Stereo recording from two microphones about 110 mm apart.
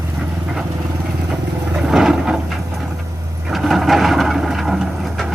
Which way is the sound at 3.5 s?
Centre (ahead or behind).